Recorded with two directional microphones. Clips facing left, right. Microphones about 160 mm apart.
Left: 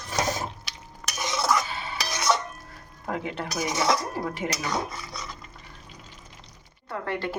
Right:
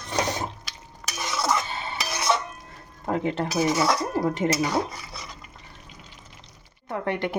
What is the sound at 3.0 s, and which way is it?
Dishes, 35° right (ahead or behind).